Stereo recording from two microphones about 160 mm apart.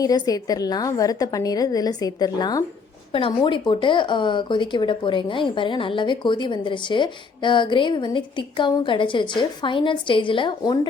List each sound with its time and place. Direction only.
0.0 s a woman's voice: 25° left (ahead or behind)